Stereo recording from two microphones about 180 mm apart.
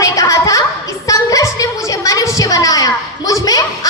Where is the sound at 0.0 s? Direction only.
15° left (ahead or behind).